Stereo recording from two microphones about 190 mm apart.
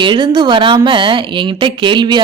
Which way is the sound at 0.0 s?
25° right (ahead or behind).